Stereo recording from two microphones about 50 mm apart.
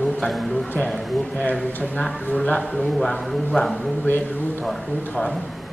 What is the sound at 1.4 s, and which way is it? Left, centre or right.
Speech, left.